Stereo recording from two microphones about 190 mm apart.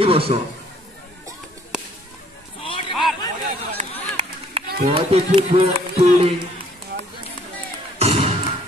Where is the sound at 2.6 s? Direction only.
25° left (ahead or behind).